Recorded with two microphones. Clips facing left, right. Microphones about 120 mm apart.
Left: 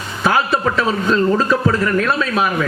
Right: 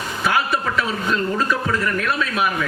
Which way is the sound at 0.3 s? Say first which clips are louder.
Left 5 dB; 35° left (ahead or behind).